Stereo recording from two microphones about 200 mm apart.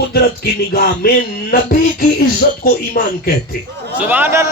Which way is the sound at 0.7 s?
50° left (ahead or behind).